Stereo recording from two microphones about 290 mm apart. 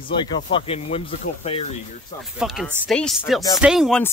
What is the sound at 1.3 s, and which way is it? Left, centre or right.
Speech, left.